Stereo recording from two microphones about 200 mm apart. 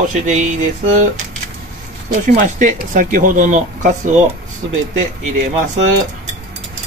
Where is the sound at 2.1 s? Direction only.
40° right (ahead or behind).